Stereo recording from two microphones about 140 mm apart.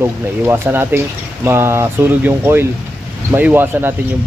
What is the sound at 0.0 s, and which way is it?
Speech, 15° right (ahead or behind).